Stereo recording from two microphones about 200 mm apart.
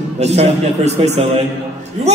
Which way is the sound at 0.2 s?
35° right (ahead or behind).